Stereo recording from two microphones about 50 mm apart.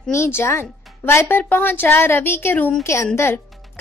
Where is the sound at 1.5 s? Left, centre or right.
Left.